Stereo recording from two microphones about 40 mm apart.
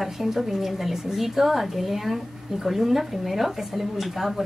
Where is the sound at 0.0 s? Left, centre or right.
Centre.